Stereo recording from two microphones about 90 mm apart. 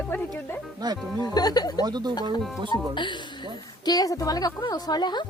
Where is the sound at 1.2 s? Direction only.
45° left (ahead or behind).